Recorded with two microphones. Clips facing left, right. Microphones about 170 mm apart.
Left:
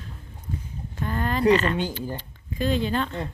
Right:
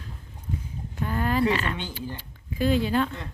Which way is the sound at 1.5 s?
5° right (ahead or behind).